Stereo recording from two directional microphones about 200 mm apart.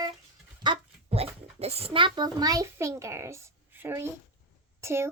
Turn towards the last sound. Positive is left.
turn(degrees=-15)  # may be behind; listen again after turning